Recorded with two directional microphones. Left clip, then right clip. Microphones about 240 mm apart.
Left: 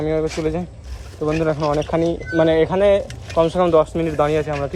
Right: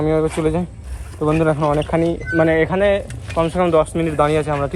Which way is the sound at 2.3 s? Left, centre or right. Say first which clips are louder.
Even; centre.